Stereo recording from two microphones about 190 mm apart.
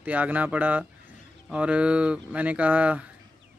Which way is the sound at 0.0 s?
10° right (ahead or behind).